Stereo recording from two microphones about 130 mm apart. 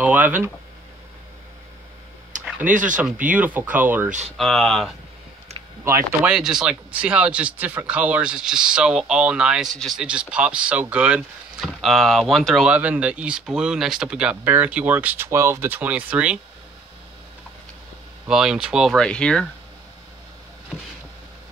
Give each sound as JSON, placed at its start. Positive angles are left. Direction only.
{"t": 0.0, "sound": "speech", "side_deg": -10}
{"t": 2.7, "sound": "speech", "side_deg": -90}
{"t": 3.0, "sound": "speech", "side_deg": -10}
{"t": 4.4, "sound": "speech", "side_deg": 5}
{"t": 6.2, "sound": "speech", "side_deg": -5}
{"t": 12.7, "sound": "speech", "side_deg": -10}
{"t": 18.3, "sound": "speech", "side_deg": -5}
{"t": 19.0, "sound": "speech", "side_deg": 5}